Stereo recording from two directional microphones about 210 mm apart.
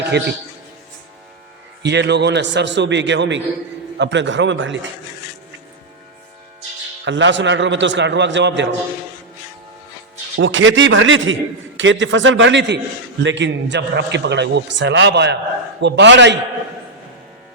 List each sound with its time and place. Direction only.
1.8 s a man's voice: 55° right (ahead or behind)
7.0 s a man's voice: 60° right (ahead or behind)
10.3 s a man's voice: 65° right (ahead or behind)